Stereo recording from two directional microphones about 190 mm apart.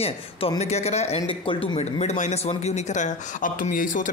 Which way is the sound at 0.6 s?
35° left (ahead or behind).